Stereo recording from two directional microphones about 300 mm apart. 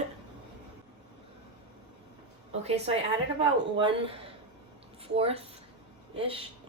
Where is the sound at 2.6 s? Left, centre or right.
Right.